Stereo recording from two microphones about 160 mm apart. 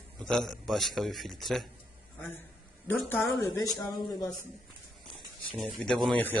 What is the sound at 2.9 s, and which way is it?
Speech, 5° left (ahead or behind).